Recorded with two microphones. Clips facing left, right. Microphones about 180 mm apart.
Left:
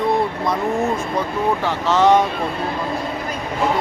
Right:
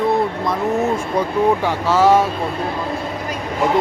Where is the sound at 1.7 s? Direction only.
10° right (ahead or behind).